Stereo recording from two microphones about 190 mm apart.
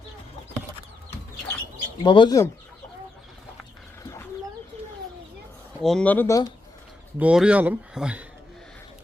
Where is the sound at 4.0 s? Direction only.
15° left (ahead or behind).